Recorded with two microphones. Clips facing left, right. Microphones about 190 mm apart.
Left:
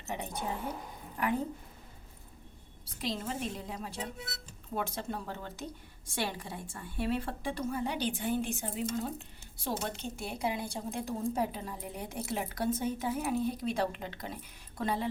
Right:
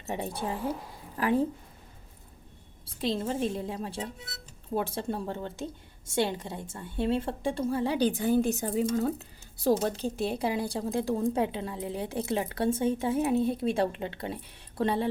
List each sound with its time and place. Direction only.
0.1 s a woman's voice: 30° right (ahead or behind)
3.0 s a woman's voice: 30° right (ahead or behind)
9.6 s a woman's voice: 35° right (ahead or behind)
11.2 s speech: 85° right
11.9 s a woman's voice: 30° right (ahead or behind)